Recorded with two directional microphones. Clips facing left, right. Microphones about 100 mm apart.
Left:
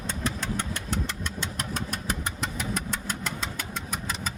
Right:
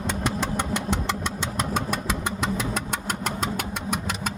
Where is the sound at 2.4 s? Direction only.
90° right.